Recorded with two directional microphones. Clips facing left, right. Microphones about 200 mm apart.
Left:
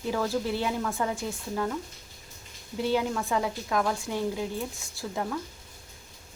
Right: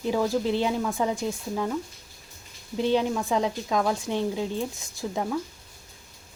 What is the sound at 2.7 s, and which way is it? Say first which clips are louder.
A woman's voice: right 3 dB; 20° right (ahead or behind).